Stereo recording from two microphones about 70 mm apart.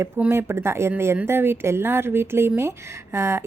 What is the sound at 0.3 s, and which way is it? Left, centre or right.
A woman's voice, right.